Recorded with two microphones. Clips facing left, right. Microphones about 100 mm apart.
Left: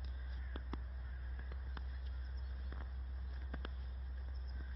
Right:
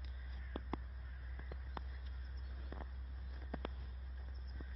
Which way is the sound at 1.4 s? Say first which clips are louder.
Right 6 dB; 90° right.